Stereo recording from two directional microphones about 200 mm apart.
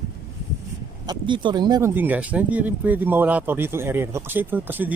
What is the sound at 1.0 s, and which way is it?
Speech, 20° right (ahead or behind).